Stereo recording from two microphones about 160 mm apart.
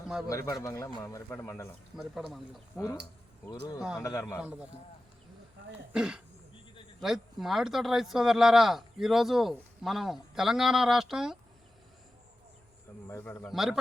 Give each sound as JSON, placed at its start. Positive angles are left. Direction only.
{"t": 0.3, "sound": "a man's voice", "side_deg": 20}
{"t": 2.0, "sound": "speech", "side_deg": 0}
{"t": 2.7, "sound": "a man's voice", "side_deg": 20}
{"t": 4.4, "sound": "a man's voice", "side_deg": -10}
{"t": 5.9, "sound": "speech", "side_deg": -5}
{"t": 13.1, "sound": "speech", "side_deg": 15}
{"t": 13.5, "sound": "speech", "side_deg": 0}